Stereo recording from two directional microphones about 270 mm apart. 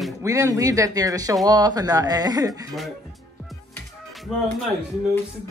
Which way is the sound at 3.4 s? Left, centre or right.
Centre.